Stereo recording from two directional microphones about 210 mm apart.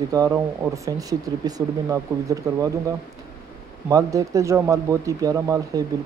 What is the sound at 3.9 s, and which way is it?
Speech, 15° right (ahead or behind).